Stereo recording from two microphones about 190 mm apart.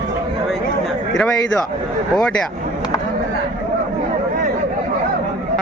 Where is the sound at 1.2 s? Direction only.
5° left (ahead or behind).